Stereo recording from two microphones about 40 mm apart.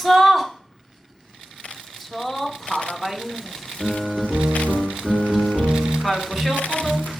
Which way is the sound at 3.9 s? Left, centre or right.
Centre.